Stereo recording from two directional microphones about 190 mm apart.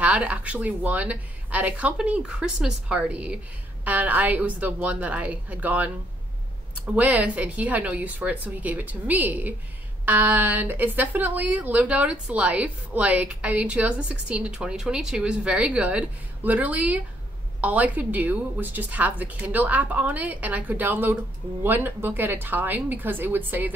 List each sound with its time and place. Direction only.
0.0 s speech: 5° right (ahead or behind)
7.0 s speech: 5° right (ahead or behind)